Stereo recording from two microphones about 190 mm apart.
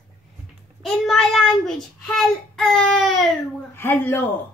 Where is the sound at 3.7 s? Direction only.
10° left (ahead or behind).